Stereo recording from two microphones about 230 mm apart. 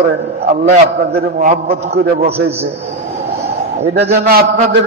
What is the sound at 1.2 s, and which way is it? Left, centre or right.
Speech, right.